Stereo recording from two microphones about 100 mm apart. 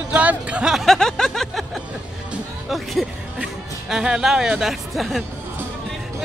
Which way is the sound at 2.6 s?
Centre (ahead or behind).